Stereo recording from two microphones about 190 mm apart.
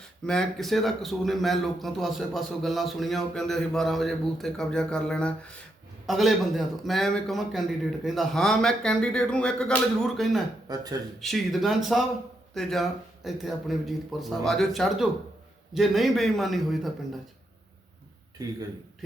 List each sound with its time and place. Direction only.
0.3 s a man's voice: centre (ahead or behind)
10.7 s speech: 20° right (ahead or behind)
11.2 s a man's voice: centre (ahead or behind)